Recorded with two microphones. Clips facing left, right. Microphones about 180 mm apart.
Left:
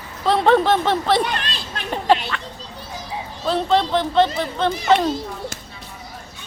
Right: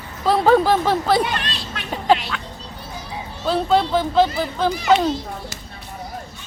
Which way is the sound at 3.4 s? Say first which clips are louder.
Right 1 dB; 5° right (ahead or behind).